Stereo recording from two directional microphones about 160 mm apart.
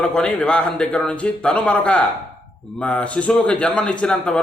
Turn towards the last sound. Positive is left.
turn(degrees=5)  # may be behind; listen again after turning